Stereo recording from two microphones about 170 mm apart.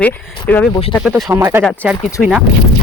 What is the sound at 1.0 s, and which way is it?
Speech, 5° right (ahead or behind).